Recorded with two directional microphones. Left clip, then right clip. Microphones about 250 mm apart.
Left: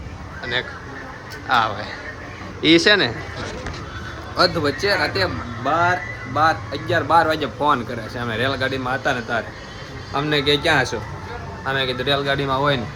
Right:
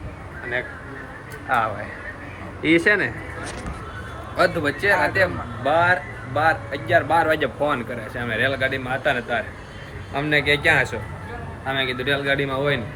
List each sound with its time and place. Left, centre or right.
1.5 s speech: centre
4.4 s speech: centre